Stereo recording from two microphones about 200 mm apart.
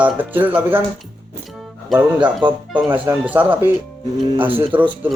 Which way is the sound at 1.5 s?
5° right (ahead or behind).